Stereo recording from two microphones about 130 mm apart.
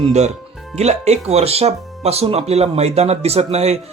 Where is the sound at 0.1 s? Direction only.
60° right (ahead or behind).